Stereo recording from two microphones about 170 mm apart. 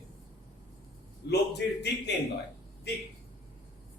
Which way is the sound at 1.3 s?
80° left.